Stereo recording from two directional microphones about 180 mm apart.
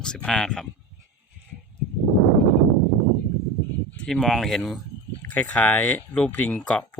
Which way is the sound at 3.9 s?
5° left (ahead or behind).